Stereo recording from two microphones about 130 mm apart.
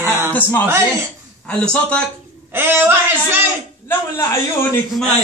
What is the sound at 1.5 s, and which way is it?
Speech, 10° left (ahead or behind).